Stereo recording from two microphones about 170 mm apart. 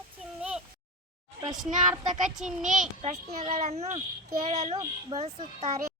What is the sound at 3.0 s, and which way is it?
A child's voice, 35° right (ahead or behind).